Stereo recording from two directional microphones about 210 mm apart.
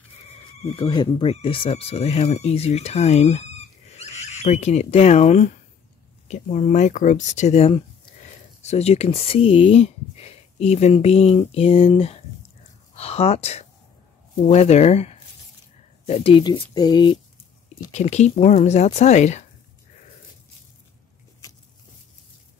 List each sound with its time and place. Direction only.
0.7 s speech: 20° left (ahead or behind)
17.9 s speech: 30° left (ahead or behind)